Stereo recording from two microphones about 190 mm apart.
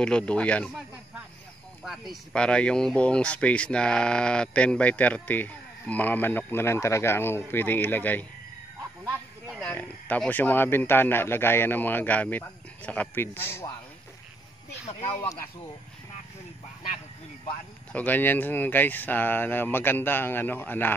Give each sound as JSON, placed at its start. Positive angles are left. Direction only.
{"t": 0.0, "sound": "speech", "side_deg": 5}
{"t": 9.6, "sound": "speech", "side_deg": 10}
{"t": 14.9, "sound": "speech", "side_deg": 30}
{"t": 17.9, "sound": "speech", "side_deg": 10}